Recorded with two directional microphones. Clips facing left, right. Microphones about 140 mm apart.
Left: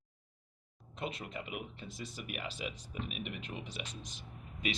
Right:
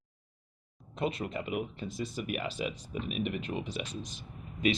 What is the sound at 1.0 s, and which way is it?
Speech, 45° right (ahead or behind).